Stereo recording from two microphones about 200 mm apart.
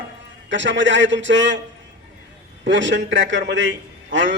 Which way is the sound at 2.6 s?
65° right (ahead or behind).